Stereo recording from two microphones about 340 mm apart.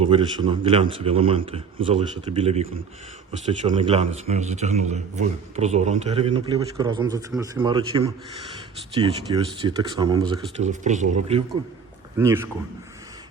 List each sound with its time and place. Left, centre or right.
0.0 s a man's voice: centre
12.1 s a man's voice: centre